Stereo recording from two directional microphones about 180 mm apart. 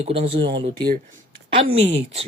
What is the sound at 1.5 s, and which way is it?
Speech, 35° right (ahead or behind).